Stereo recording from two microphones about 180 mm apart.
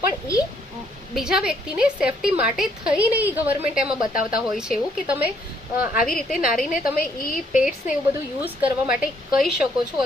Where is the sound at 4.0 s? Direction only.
50° left (ahead or behind).